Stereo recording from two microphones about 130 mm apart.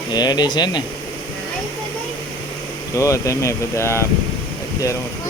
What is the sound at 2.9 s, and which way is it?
Speech, 25° left (ahead or behind).